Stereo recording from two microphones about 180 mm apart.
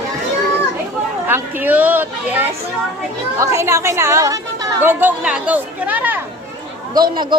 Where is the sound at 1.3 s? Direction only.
10° right (ahead or behind).